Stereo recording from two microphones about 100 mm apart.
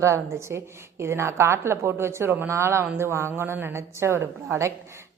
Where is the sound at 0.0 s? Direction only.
30° right (ahead or behind).